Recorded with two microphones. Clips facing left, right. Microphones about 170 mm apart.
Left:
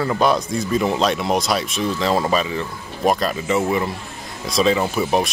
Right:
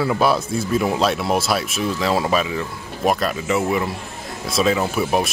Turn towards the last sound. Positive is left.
turn(degrees=-5)  # may be behind; listen again after turning